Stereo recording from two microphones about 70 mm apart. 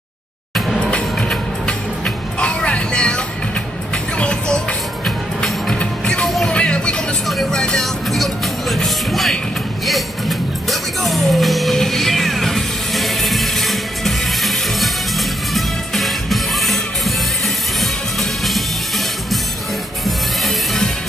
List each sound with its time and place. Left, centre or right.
0.7 s music: centre
4.2 s music: centre
6.2 s music: centre
6.5 s music: centre
7.2 s music: centre
20.1 s music: centre